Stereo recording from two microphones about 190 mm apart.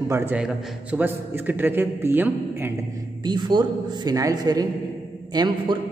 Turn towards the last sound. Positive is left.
turn(degrees=-20)  # may be behind; listen again after turning